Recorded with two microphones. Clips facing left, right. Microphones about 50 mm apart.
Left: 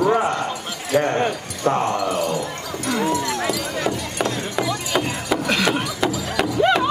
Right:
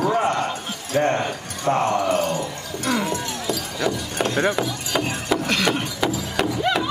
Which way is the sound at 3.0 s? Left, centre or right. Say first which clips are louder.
Left 4 dB; left.